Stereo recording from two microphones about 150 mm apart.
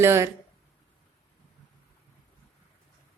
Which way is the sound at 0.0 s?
15° right (ahead or behind).